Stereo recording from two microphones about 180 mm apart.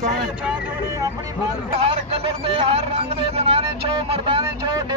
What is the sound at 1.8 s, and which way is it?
Speech, 35° right (ahead or behind).